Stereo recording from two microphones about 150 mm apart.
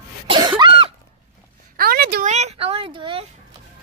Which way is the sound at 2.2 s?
50° right (ahead or behind).